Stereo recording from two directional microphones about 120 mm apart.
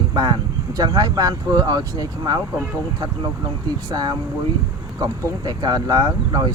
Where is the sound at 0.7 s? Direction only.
35° right (ahead or behind).